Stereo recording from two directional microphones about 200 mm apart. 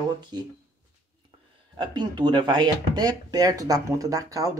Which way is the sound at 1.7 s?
20° right (ahead or behind).